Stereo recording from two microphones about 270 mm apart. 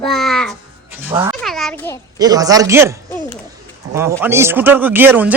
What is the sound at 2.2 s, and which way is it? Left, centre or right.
Speech, centre.